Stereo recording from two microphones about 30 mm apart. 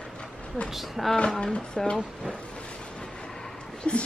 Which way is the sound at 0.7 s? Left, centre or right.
Centre.